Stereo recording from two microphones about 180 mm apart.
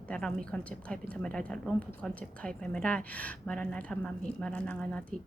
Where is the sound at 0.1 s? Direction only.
5° left (ahead or behind).